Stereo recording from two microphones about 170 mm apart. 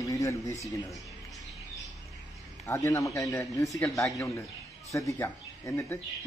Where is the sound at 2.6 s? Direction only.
15° left (ahead or behind).